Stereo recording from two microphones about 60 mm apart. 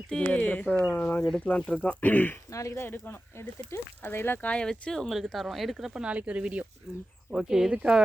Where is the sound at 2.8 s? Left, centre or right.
Left.